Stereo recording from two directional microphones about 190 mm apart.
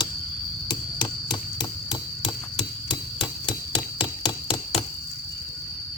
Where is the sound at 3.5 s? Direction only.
25° left (ahead or behind).